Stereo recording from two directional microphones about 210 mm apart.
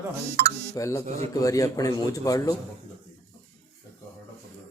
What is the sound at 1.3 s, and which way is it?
A man's voice, 15° left (ahead or behind).